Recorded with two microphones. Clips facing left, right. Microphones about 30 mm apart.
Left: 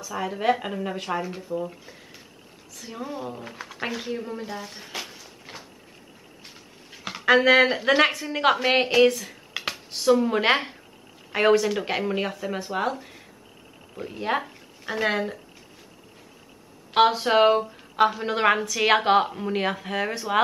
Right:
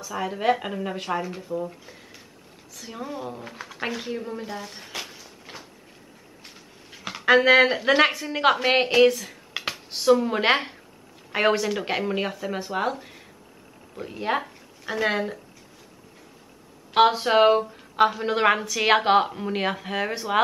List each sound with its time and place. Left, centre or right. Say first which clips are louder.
0.0 s a woman's voice: even; centre
16.9 s a woman's voice: right 1 dB; centre